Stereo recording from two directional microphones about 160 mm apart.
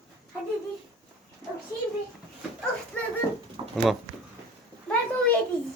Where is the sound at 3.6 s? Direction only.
30° right (ahead or behind).